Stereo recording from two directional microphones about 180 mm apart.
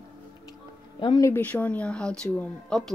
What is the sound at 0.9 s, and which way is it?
Speech, 25° left (ahead or behind).